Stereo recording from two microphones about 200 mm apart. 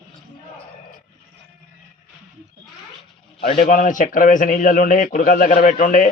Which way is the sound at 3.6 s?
40° left (ahead or behind).